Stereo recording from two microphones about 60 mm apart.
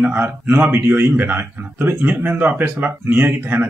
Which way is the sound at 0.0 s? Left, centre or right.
Right.